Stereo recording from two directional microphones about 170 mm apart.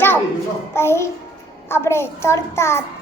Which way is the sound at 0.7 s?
15° left (ahead or behind).